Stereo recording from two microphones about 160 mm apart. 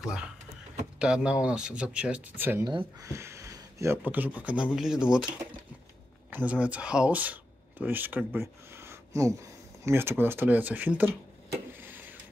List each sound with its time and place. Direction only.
0.0 s speech: 5° right (ahead or behind)
2.6 s speech: 25° right (ahead or behind); by 5.2 s 5° right (ahead or behind)
6.3 s speech: 10° right (ahead or behind)